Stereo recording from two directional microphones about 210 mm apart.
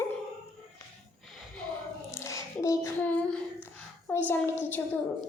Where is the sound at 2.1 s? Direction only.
15° left (ahead or behind).